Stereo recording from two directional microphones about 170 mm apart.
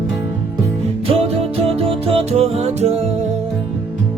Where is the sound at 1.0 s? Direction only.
35° right (ahead or behind).